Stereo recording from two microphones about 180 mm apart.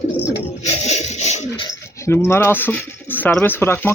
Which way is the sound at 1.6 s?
15° left (ahead or behind).